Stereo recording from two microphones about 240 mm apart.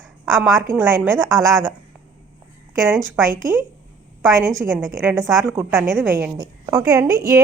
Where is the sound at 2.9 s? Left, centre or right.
Centre.